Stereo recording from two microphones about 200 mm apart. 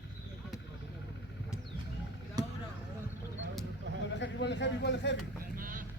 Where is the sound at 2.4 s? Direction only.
20° right (ahead or behind).